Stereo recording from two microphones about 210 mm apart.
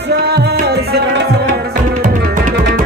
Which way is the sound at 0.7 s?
50° right (ahead or behind).